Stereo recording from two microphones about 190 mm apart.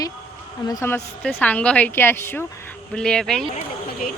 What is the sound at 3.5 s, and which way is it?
Speech, 45° left (ahead or behind).